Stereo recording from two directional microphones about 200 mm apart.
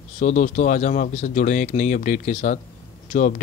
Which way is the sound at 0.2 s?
35° left (ahead or behind).